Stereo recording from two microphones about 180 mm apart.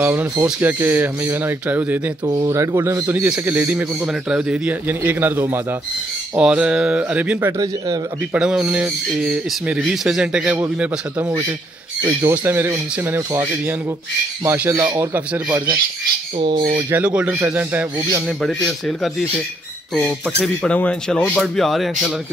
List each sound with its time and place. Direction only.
0.0 s a man's voice: 10° right (ahead or behind)
2.2 s a man's voice: 20° right (ahead or behind)
8.4 s a man's voice: 5° right (ahead or behind)
16.3 s speech: 30° right (ahead or behind)
16.9 s a man's voice: 5° right (ahead or behind)
18.4 s speech: 5° left (ahead or behind)